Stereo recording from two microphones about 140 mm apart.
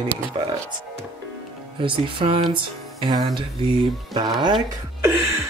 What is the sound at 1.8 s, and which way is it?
Speech, 40° right (ahead or behind).